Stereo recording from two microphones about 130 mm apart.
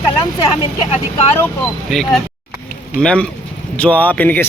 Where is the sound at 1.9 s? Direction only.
5° left (ahead or behind).